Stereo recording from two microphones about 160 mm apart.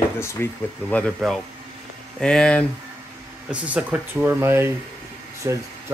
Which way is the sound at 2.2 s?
5° left (ahead or behind).